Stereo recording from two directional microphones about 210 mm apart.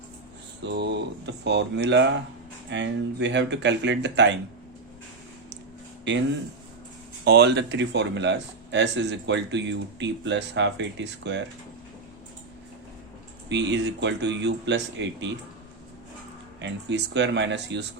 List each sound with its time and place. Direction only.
0.6 s speech: 55° right (ahead or behind)
7.3 s speech: 55° right (ahead or behind)
13.5 s speech: 55° right (ahead or behind)
16.6 s speech: 55° right (ahead or behind)